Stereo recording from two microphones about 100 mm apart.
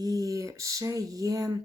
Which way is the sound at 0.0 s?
35° right (ahead or behind).